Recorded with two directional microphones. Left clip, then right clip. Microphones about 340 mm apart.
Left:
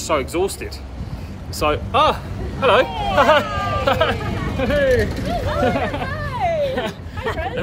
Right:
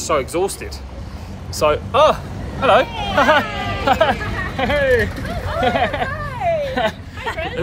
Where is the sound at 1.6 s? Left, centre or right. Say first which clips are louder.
Right 3 dB; centre.